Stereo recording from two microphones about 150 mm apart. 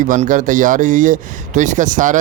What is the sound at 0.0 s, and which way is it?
A man's voice, 60° right (ahead or behind).